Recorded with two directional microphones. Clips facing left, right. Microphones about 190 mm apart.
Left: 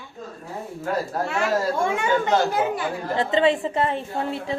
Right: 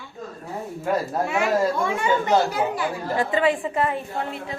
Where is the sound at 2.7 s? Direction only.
25° left (ahead or behind).